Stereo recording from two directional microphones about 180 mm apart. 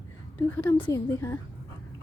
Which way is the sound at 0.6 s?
10° left (ahead or behind).